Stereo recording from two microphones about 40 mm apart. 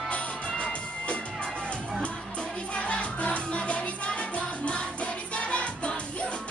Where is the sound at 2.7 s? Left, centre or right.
Left.